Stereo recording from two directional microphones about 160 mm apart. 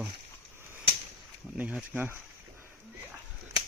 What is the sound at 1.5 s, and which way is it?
Speech, 10° right (ahead or behind).